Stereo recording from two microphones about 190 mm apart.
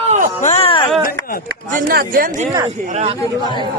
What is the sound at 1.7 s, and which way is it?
Speech, 50° right (ahead or behind).